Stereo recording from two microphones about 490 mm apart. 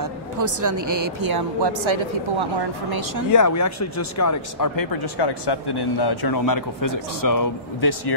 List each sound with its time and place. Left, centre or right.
0.0 s speech: right
3.3 s speech: left